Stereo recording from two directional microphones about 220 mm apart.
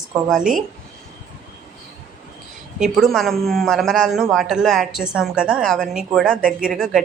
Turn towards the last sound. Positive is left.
turn(degrees=0)  # may be behind; listen again after turning